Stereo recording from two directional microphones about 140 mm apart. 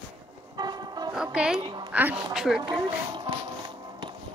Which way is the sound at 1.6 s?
35° right (ahead or behind).